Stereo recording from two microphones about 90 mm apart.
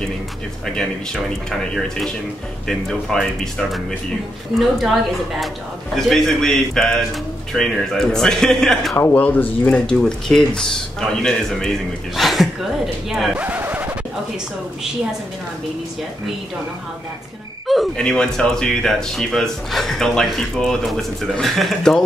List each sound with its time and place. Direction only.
1.5 s speech: 5° left (ahead or behind)
8.9 s speech: 20° left (ahead or behind)
9.8 s speech: 5° left (ahead or behind)
13.4 s a sound: 20° right (ahead or behind)
17.6 s speech: centre (ahead or behind)